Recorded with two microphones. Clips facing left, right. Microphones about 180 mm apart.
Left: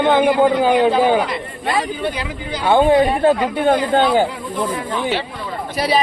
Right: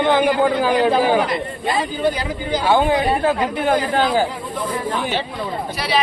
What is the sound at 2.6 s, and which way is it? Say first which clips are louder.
Speech: left 4 dB; 30° left (ahead or behind).